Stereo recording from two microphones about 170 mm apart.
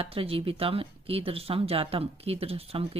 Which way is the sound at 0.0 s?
35° right (ahead or behind).